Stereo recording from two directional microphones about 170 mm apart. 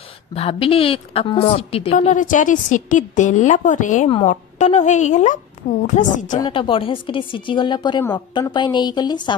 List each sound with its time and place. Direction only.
0.3 s a woman's voice: 35° left (ahead or behind)
6.3 s speech: 25° left (ahead or behind)